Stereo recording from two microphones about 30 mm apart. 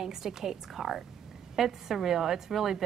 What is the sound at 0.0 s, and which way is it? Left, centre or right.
A woman's voice, centre.